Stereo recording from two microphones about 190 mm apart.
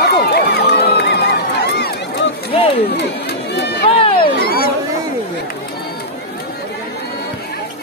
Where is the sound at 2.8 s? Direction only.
60° left (ahead or behind).